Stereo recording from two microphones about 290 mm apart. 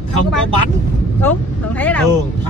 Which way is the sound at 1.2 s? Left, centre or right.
Centre.